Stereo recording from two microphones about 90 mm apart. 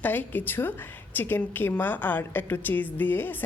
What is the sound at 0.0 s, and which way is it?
A woman's voice, 20° left (ahead or behind).